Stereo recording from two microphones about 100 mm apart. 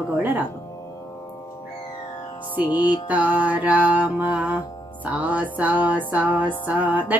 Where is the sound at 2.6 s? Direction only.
50° left (ahead or behind).